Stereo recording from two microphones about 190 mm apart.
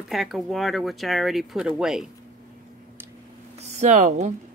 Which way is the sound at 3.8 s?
40° right (ahead or behind).